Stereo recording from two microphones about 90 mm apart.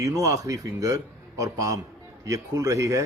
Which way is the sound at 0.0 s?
40° right (ahead or behind).